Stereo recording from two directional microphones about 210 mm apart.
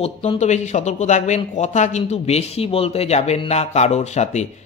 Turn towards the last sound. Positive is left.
turn(degrees=30)  # may be behind; listen again after turning